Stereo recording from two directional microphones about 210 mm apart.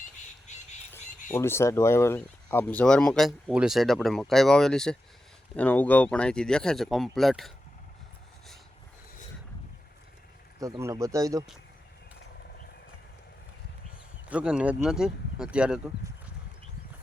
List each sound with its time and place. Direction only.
0.5 s squawk: 35° left (ahead or behind)
1.3 s speech: 10° left (ahead or behind)
10.6 s speech: 15° right (ahead or behind)
14.3 s speech: 5° right (ahead or behind)